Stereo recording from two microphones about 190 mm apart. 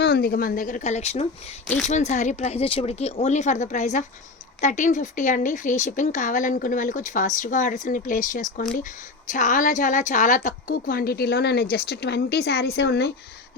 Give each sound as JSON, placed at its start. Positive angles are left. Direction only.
{"t": 0.0, "sound": "a woman's voice", "side_deg": 55}